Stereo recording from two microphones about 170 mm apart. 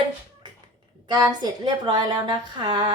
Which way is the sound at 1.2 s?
25° right (ahead or behind).